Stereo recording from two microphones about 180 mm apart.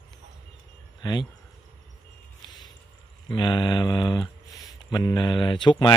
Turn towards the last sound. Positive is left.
turn(degrees=25)  # may be behind; listen again after turning